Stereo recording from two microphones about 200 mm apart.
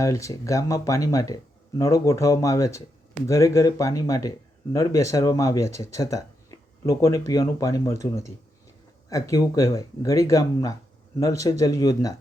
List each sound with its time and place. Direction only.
0.0 s speech: 15° left (ahead or behind)